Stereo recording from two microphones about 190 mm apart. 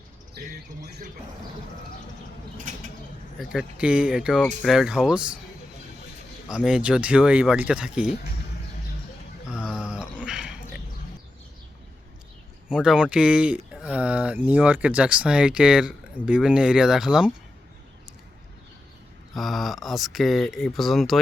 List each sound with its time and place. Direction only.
3.5 s speech: 5° right (ahead or behind)
6.5 s speech: 5° right (ahead or behind)
9.5 s a sound: 5° right (ahead or behind)
12.6 s speech: 5° right (ahead or behind)
19.3 s speech: centre (ahead or behind)